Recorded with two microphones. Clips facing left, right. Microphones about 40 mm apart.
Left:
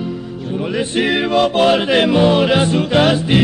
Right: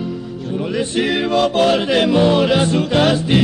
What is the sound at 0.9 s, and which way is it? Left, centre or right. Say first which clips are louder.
Music: left 2 dB; centre.